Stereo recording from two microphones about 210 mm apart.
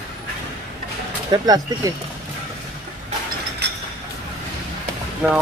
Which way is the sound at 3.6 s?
55° right (ahead or behind).